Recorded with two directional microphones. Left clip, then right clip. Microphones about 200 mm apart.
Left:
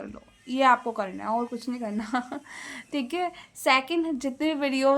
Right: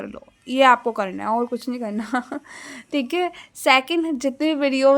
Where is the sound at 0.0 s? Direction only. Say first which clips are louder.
Right 6 dB; 40° right (ahead or behind).